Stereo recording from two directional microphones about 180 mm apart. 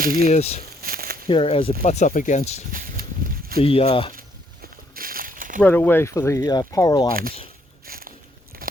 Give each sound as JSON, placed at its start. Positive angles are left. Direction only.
{"t": 0.0, "sound": "speech", "side_deg": -55}
{"t": 0.3, "sound": "speech", "side_deg": 35}
{"t": 0.8, "sound": "a sound", "side_deg": -55}
{"t": 1.3, "sound": "speech", "side_deg": 30}
{"t": 2.7, "sound": "walk", "side_deg": -50}
{"t": 3.6, "sound": "speech", "side_deg": 30}
{"t": 4.1, "sound": "a sound", "side_deg": -50}
{"t": 5.6, "sound": "speech", "side_deg": 10}
{"t": 7.1, "sound": "speech", "side_deg": -55}
{"t": 7.9, "sound": "biting", "side_deg": -55}
{"t": 8.6, "sound": "crunch", "side_deg": -55}